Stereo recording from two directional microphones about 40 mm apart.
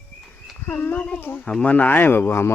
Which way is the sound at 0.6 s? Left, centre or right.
Left.